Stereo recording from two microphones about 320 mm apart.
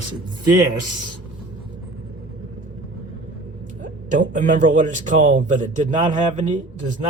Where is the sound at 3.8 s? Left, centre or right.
Right.